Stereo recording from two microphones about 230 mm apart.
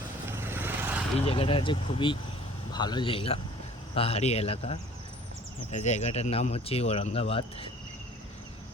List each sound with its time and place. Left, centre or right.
0.3 s vehicle: centre
1.2 s speech: left